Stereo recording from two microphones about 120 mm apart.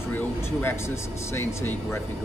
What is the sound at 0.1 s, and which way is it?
Speech, 20° left (ahead or behind).